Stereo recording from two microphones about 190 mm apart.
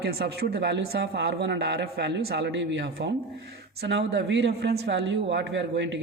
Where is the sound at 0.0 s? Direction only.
55° right (ahead or behind).